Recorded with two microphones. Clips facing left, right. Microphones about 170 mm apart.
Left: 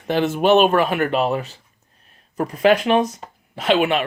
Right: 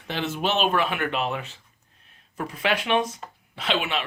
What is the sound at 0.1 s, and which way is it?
Speech, 50° left (ahead or behind).